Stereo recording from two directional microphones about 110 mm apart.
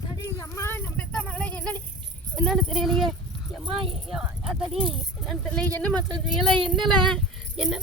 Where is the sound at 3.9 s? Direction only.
Centre (ahead or behind).